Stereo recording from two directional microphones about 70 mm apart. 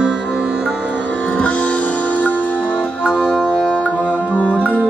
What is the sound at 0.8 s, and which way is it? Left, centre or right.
Music, centre.